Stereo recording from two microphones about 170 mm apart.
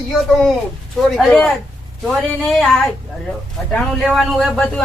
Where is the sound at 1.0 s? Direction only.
Centre (ahead or behind).